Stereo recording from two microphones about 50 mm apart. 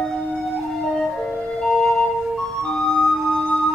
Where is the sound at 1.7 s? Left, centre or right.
Centre.